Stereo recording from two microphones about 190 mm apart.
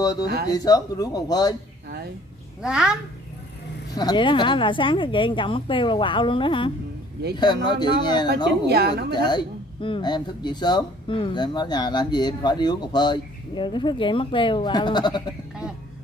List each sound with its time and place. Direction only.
0.0 s speech: 20° left (ahead or behind)
2.6 s a child's voice: 5° right (ahead or behind)
3.9 s speech: 20° left (ahead or behind)
8.6 s a woman's voice: 60° right (ahead or behind)
9.1 s speech: 25° left (ahead or behind)